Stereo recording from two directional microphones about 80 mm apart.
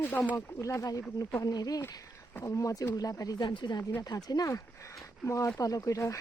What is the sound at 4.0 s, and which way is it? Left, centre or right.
Speech, left.